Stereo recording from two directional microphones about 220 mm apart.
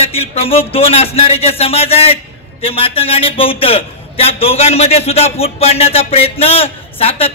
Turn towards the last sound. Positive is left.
turn(degrees=25)  # may be behind; listen again after turning